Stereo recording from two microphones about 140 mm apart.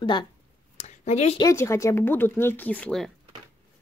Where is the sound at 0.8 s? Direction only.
55° left (ahead or behind).